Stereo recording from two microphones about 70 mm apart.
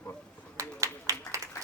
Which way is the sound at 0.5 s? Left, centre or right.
Right.